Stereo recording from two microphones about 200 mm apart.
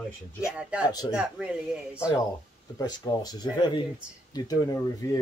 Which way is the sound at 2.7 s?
20° left (ahead or behind).